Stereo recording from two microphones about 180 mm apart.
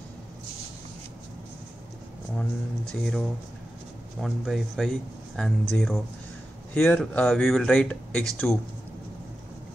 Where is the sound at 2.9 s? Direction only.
Centre (ahead or behind).